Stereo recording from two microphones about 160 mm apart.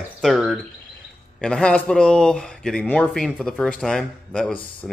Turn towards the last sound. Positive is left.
turn(degrees=5)  # may be behind; listen again after turning